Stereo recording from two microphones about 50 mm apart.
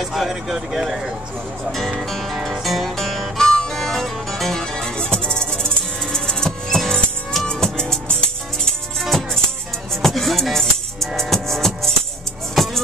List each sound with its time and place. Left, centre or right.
0.0 s speech: centre
1.7 s speech: centre
2.0 s music: centre
9.0 s music: centre